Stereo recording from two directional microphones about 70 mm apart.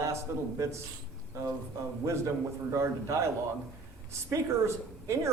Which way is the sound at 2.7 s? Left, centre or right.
Right.